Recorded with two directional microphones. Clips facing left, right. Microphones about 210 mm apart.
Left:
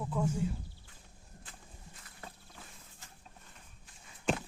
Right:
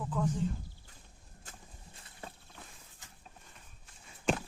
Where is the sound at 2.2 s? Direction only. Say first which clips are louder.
Right 3 dB; 25° right (ahead or behind).